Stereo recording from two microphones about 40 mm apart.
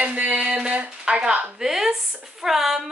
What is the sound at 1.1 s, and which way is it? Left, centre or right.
Speech, right.